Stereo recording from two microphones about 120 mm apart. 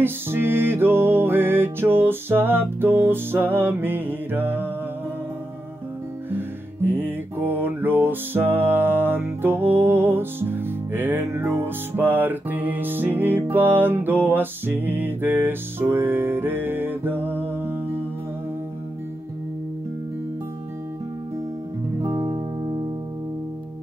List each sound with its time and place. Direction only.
0.0 s music: 20° right (ahead or behind)
6.3 s music: 15° right (ahead or behind)
22.0 s music: 35° right (ahead or behind)